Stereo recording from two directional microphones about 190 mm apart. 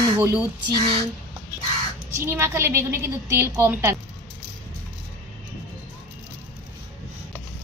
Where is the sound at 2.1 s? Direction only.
15° right (ahead or behind).